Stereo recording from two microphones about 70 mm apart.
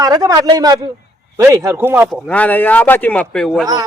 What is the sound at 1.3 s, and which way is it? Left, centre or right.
Speech, right.